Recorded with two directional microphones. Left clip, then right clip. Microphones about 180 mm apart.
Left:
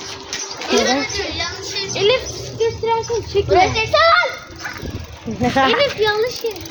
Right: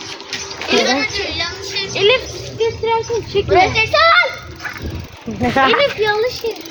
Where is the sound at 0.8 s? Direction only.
55° left (ahead or behind).